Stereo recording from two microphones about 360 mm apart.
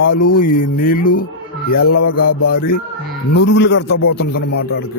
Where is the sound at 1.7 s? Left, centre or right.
Left.